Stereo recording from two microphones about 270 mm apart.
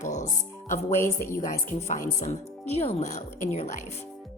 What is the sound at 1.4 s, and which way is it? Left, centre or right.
A woman's voice, left.